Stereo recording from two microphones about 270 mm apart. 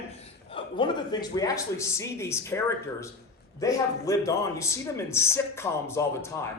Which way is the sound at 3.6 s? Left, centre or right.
Centre.